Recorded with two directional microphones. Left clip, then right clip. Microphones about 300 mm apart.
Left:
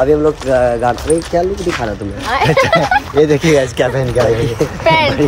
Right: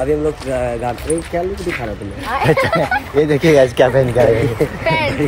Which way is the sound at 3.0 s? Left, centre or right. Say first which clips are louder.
Left 6 dB; centre.